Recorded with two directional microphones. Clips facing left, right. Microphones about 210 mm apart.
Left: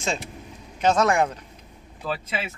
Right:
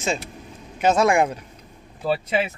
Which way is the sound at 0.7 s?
10° right (ahead or behind).